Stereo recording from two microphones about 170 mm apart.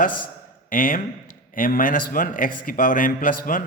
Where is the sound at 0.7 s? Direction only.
55° left (ahead or behind).